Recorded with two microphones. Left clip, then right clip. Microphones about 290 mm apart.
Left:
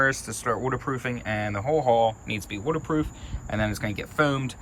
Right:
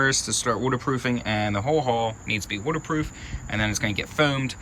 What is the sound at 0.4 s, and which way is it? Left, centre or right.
Speech, centre.